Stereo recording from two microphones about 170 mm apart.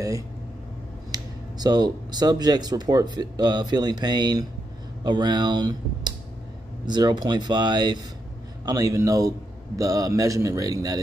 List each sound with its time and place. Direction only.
1.1 s speech: 25° right (ahead or behind)